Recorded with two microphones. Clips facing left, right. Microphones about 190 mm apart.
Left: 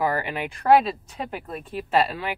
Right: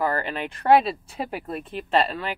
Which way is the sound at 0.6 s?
Centre (ahead or behind).